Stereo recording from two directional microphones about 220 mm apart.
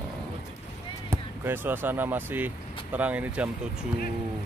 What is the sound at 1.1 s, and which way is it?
Speech, 10° right (ahead or behind).